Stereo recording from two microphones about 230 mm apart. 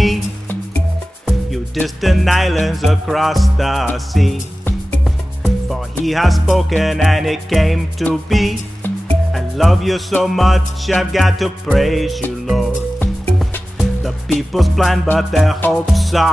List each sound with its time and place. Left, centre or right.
0.0 s music: centre